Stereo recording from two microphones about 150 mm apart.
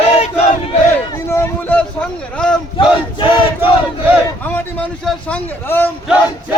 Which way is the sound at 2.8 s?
35° left (ahead or behind).